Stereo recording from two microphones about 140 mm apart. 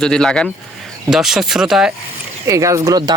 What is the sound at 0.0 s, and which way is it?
Speech, 5° left (ahead or behind).